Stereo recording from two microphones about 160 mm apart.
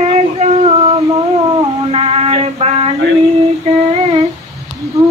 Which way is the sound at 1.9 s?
40° right (ahead or behind).